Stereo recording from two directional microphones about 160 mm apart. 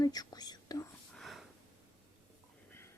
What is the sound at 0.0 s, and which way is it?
Whispering, 25° left (ahead or behind).